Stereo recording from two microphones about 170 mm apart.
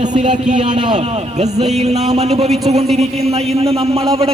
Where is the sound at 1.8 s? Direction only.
40° right (ahead or behind).